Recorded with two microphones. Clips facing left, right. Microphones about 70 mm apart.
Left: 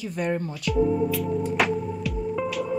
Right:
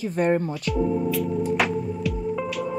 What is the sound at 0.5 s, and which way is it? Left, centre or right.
Music, centre.